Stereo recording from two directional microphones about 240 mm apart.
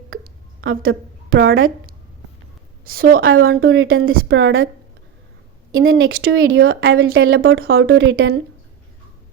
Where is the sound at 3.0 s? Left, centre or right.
Right.